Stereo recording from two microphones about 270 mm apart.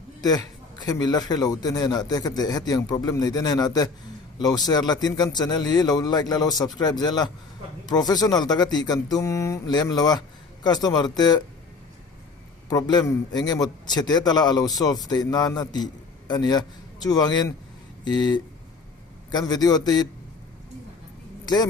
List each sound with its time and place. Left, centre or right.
0.2 s speech: centre
12.6 s speech: centre
21.4 s speech: centre